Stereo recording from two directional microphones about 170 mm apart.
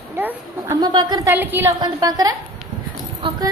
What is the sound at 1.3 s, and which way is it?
Speech, 10° right (ahead or behind).